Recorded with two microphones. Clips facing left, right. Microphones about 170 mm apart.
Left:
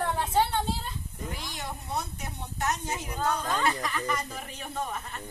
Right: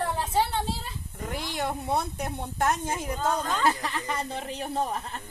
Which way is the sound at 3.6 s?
30° right (ahead or behind).